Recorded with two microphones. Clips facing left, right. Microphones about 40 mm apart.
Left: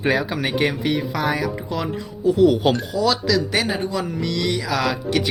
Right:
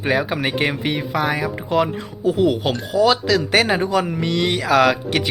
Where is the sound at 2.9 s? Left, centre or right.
Right.